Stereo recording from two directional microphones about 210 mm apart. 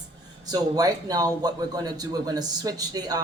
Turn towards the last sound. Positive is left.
turn(degrees=-20)  # may be behind; listen again after turning